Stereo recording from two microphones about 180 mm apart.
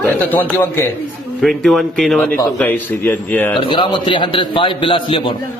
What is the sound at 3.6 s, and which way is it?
A man's voice, 25° left (ahead or behind).